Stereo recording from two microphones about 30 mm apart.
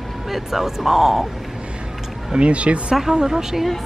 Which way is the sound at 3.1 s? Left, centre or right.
Centre.